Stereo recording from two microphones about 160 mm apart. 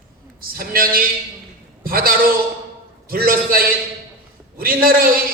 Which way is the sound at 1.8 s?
65° right (ahead or behind).